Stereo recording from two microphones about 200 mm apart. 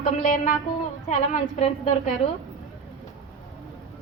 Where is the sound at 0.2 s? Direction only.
35° left (ahead or behind).